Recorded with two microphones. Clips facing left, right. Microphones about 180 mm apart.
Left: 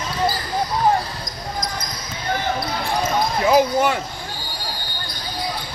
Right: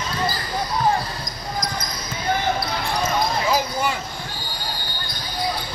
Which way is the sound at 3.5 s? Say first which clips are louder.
Left 6 dB; 60° left (ahead or behind).